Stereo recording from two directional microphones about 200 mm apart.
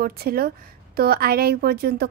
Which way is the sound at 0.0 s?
50° right (ahead or behind).